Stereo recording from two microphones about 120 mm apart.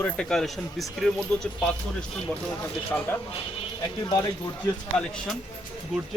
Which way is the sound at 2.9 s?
10° left (ahead or behind).